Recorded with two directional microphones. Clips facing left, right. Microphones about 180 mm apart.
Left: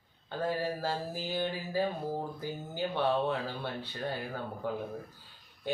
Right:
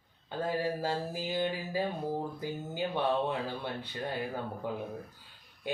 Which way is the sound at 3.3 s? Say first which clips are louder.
Even; 15° right (ahead or behind).